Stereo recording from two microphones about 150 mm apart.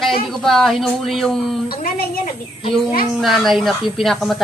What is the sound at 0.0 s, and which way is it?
Speech, centre (ahead or behind).